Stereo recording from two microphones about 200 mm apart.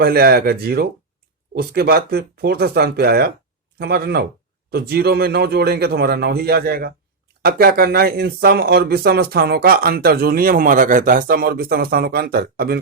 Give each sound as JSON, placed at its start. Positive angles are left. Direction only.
{"t": 0.0, "sound": "speech", "side_deg": -50}